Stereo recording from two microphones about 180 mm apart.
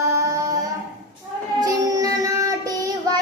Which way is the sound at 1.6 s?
20° right (ahead or behind).